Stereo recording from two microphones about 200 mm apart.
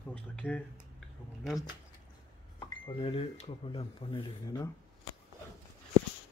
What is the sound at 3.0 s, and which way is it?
Speech, 30° left (ahead or behind).